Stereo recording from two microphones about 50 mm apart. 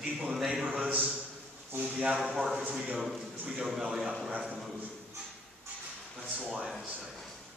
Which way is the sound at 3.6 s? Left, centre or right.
Centre.